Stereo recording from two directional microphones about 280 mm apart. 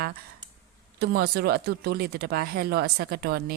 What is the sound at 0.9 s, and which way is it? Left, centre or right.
Speech, right.